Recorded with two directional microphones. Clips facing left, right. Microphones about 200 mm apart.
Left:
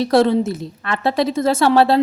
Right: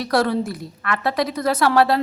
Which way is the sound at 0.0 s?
25° left (ahead or behind).